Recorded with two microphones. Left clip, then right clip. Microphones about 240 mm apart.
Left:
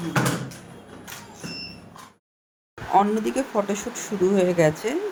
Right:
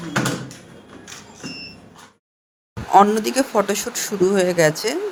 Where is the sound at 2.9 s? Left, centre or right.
Right.